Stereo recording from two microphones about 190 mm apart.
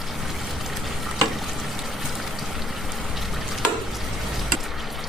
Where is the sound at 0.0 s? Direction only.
Centre (ahead or behind).